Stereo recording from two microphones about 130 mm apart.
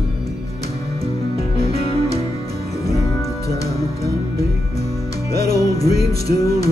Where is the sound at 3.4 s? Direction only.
25° left (ahead or behind).